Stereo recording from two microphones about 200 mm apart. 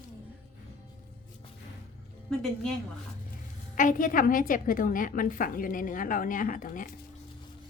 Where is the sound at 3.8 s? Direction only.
40° left (ahead or behind).